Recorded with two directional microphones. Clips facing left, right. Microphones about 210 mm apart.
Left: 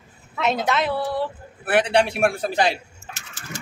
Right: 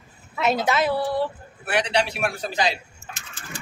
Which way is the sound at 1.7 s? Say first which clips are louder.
Left 4 dB; 55° left (ahead or behind).